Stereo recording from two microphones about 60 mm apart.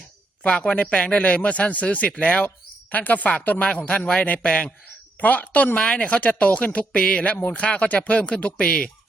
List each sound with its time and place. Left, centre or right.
0.4 s speech: centre